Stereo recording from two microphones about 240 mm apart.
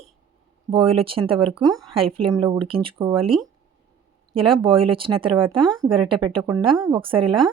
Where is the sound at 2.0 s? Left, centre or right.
Right.